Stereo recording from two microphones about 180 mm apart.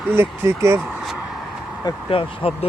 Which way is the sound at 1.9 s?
30° left (ahead or behind).